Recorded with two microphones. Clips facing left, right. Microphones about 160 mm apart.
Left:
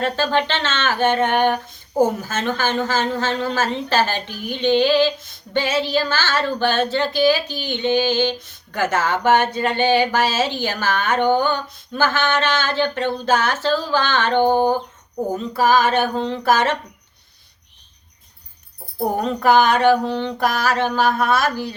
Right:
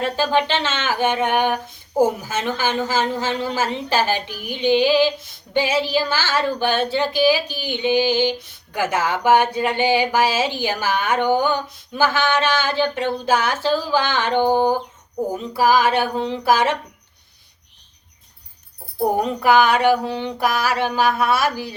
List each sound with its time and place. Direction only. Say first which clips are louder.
0.0 s a woman's voice: even; 10° right (ahead or behind)
19.2 s a woman's voice: left 2 dB; 10° right (ahead or behind)